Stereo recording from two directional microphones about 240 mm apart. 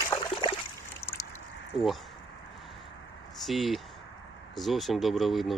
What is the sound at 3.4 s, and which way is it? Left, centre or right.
Speech, centre.